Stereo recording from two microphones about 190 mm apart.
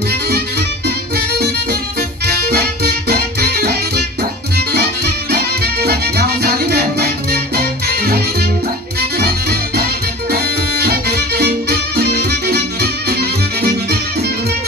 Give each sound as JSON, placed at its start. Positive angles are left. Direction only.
{"t": 0.1, "sound": "music", "side_deg": -60}